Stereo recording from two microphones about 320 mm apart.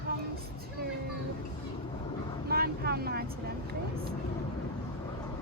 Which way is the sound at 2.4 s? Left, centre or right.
Right.